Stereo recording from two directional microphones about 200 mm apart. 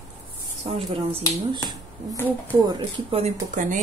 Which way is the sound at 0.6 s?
30° right (ahead or behind).